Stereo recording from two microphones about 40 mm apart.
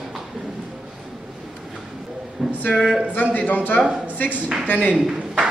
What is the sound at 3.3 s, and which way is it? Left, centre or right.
Speech, left.